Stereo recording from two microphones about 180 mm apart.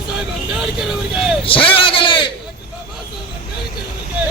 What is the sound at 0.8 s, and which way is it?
Vehicle, centre (ahead or behind).